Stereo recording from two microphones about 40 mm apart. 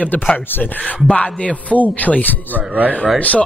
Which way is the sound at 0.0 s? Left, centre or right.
Left.